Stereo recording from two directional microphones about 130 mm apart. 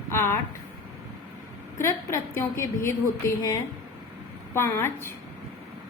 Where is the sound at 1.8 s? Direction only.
20° left (ahead or behind).